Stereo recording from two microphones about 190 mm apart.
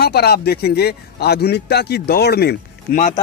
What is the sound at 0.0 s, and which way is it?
A man's voice, 55° left (ahead or behind).